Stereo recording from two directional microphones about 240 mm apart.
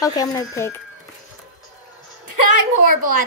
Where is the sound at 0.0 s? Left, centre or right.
Centre.